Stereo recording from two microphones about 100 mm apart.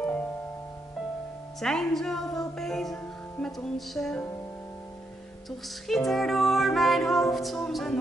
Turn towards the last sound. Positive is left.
turn(degrees=5)  # may be behind; listen again after turning